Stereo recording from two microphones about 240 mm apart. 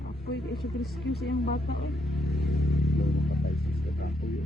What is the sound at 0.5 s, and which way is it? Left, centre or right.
Speech, centre.